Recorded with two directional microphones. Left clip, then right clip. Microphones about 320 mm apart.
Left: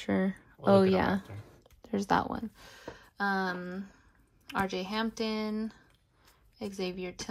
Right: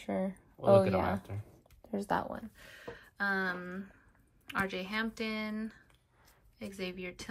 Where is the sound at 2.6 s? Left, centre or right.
Centre.